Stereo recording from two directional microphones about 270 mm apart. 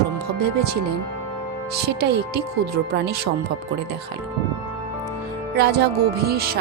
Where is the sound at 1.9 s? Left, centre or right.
Right.